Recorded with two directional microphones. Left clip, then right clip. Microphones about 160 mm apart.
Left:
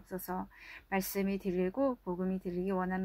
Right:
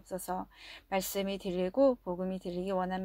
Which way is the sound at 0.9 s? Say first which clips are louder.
Right 2 dB; 60° right (ahead or behind).